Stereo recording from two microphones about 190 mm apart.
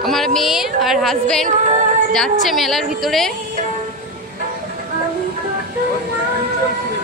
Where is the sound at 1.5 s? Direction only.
40° right (ahead or behind).